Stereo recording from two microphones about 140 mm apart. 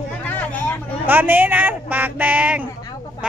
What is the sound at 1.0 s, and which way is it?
Speech, 15° right (ahead or behind).